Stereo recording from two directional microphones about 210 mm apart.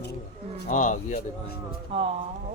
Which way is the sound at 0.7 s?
35° left (ahead or behind).